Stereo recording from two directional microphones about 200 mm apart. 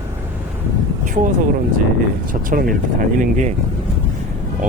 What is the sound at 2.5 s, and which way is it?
Speech, 45° right (ahead or behind).